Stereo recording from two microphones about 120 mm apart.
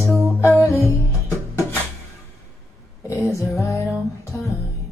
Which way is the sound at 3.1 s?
25° left (ahead or behind).